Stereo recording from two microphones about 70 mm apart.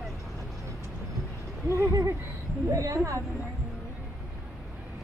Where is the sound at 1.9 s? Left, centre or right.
Right.